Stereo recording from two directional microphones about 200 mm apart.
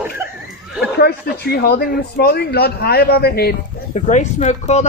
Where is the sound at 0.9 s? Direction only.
50° left (ahead or behind).